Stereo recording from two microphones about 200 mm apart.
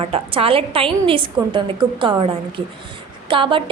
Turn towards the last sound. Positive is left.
turn(degrees=-25)  # may be behind; listen again after turning